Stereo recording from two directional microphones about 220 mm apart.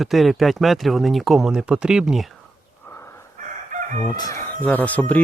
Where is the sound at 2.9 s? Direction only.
10° left (ahead or behind).